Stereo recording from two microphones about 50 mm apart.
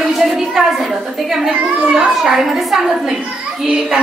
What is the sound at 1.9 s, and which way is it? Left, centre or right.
Speech, centre.